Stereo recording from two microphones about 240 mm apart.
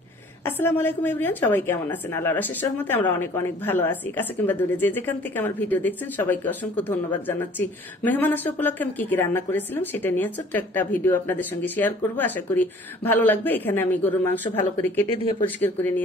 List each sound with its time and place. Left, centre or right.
0.5 s speech: centre
15.0 s speech: left
15.6 s speech: centre